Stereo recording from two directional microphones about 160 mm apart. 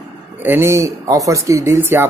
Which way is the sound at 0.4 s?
15° right (ahead or behind).